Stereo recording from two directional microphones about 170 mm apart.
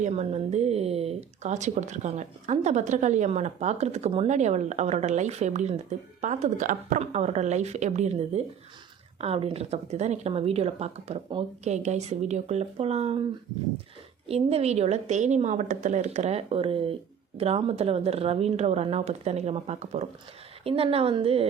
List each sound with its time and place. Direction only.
0.0 s speech: 40° right (ahead or behind)
14.3 s speech: 35° right (ahead or behind)